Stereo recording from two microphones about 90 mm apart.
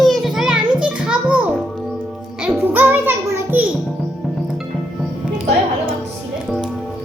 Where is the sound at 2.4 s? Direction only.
20° right (ahead or behind).